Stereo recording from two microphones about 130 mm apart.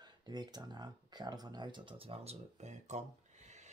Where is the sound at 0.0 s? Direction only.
35° right (ahead or behind).